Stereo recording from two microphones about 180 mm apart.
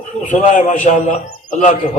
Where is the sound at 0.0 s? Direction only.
45° left (ahead or behind).